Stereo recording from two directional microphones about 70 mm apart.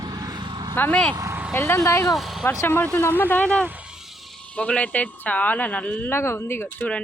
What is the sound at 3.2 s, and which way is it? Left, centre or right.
Speech, left.